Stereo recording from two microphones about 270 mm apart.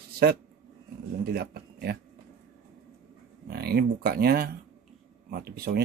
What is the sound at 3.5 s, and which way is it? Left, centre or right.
Speech, right.